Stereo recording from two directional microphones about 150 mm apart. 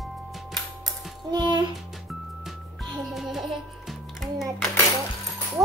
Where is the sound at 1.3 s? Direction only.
30° right (ahead or behind).